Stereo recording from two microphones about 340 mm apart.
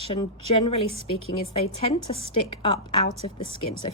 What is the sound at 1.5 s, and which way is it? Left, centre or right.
A woman's voice, centre.